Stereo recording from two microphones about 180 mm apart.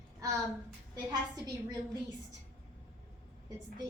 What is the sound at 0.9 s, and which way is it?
A woman's voice, 20° right (ahead or behind).